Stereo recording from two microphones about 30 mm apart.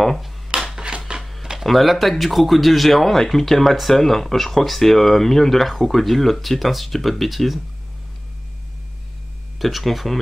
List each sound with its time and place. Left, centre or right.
0.5 s a sound: right
1.6 s speech: centre
9.6 s speech: centre